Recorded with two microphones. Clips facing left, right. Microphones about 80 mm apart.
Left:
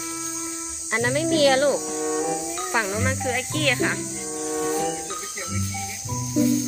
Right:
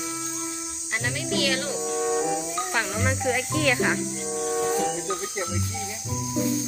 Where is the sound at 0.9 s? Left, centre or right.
Left.